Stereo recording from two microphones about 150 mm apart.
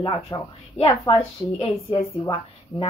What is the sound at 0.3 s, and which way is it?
Speech, 30° left (ahead or behind).